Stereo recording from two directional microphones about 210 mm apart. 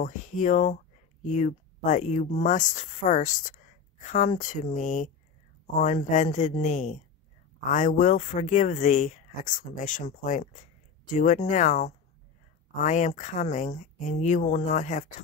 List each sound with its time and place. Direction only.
0.0 s speech: 35° left (ahead or behind)